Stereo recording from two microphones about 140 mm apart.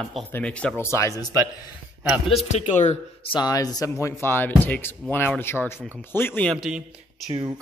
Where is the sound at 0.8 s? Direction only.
20° left (ahead or behind).